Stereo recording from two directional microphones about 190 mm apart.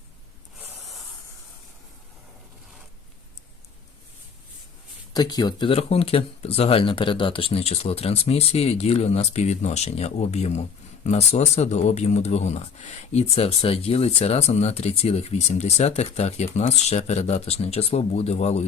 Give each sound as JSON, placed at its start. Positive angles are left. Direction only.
{"t": 5.1, "sound": "speech", "side_deg": 20}